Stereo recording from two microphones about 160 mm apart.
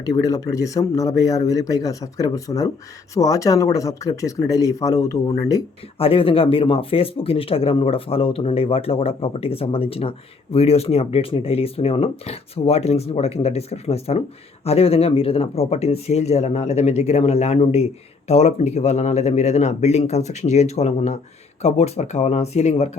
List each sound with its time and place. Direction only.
0.0 s speech: 20° left (ahead or behind)
6.0 s a man's voice: 35° left (ahead or behind)